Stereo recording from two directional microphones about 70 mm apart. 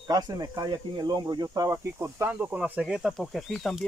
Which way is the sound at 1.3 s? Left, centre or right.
Right.